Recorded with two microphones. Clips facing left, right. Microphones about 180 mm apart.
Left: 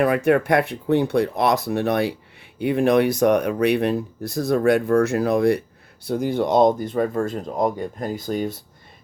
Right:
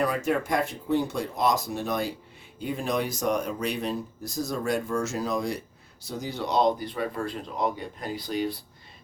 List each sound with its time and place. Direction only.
0.0 s speech: 60° left (ahead or behind); by 8.5 s 45° left (ahead or behind)